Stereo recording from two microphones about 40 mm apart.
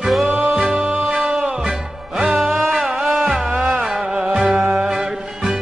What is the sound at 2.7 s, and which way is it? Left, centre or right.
Music, right.